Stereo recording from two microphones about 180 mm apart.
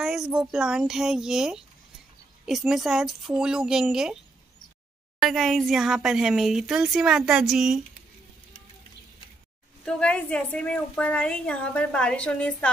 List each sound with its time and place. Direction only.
0.0 s a woman's voice: centre (ahead or behind)
5.2 s a woman's voice: centre (ahead or behind)
9.8 s a woman's voice: 5° left (ahead or behind)